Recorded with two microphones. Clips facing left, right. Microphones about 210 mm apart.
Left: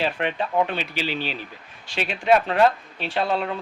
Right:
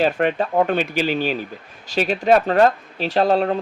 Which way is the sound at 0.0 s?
45° right (ahead or behind).